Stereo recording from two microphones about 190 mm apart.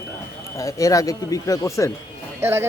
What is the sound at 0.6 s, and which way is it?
A man's voice, 15° left (ahead or behind).